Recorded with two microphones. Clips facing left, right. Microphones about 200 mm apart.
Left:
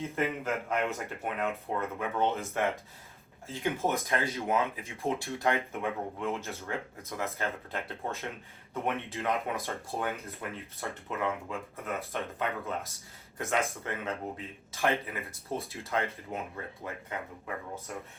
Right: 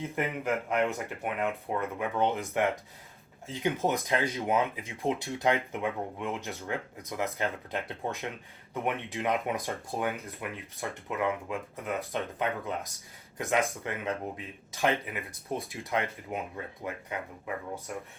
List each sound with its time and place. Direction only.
0.2 s speech: 15° right (ahead or behind)